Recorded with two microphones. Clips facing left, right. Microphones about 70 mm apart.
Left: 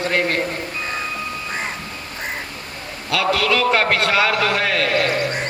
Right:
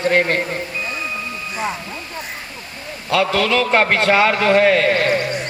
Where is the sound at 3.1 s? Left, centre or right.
Right.